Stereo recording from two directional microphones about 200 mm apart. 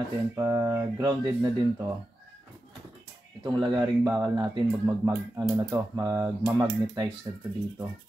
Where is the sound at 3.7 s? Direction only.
5° right (ahead or behind).